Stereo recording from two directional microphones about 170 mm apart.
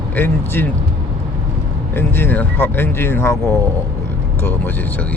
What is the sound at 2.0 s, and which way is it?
Speech, 10° left (ahead or behind).